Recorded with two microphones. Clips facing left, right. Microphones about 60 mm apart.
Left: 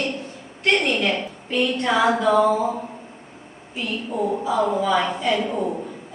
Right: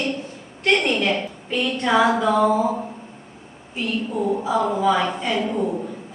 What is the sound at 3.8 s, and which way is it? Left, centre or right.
A woman's voice, centre.